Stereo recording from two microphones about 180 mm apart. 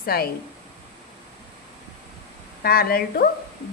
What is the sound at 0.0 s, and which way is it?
Speech, 55° left (ahead or behind).